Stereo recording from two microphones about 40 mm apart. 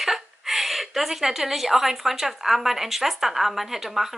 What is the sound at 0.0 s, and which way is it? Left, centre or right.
A woman's voice, centre.